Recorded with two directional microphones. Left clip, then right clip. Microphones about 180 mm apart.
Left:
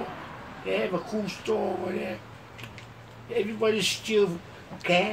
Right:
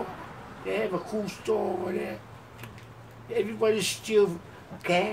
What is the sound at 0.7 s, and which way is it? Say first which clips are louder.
Speech: left 1 dB; 5° right (ahead or behind).